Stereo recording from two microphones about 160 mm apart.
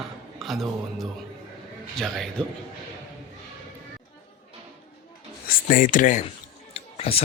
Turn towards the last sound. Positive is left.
turn(degrees=35)  # may be behind; listen again after turning